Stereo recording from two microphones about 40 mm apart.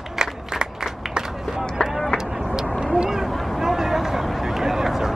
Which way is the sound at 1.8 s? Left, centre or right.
Left.